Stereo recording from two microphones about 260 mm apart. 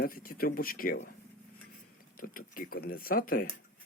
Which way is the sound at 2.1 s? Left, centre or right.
Left.